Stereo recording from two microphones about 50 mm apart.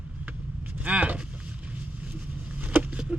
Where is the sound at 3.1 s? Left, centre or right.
Right.